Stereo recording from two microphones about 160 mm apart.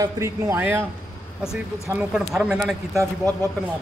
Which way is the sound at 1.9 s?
5° right (ahead or behind).